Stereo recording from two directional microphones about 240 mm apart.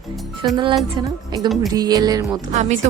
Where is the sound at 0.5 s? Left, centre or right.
Centre.